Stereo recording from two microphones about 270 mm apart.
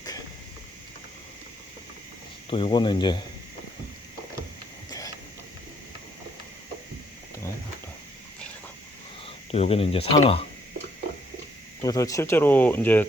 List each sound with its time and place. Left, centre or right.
2.5 s speech: centre
4.9 s a sound: centre
9.2 s speech: left
11.8 s speech: centre